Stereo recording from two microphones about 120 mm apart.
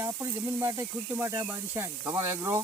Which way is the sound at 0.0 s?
20° right (ahead or behind).